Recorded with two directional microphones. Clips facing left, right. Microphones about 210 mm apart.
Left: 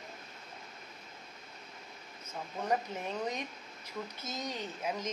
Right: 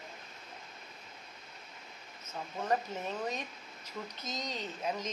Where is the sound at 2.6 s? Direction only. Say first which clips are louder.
Even; 15° left (ahead or behind).